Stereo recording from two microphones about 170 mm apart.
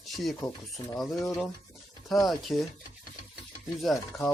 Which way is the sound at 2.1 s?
Centre (ahead or behind).